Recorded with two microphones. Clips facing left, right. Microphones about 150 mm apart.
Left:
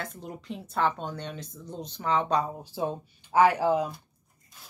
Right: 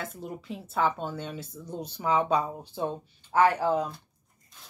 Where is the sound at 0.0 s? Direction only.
5° right (ahead or behind).